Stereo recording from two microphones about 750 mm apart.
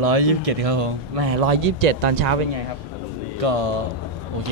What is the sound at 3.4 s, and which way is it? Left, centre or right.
Speech, right.